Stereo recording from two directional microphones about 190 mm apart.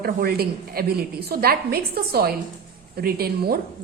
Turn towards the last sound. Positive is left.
turn(degrees=-55)  # may be behind; listen again after turning